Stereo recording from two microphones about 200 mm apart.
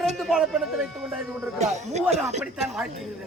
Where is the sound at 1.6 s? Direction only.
35° right (ahead or behind).